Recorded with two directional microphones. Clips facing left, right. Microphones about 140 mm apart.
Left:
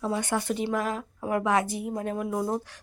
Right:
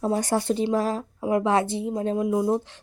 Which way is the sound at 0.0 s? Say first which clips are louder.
Right 4 dB; 40° right (ahead or behind).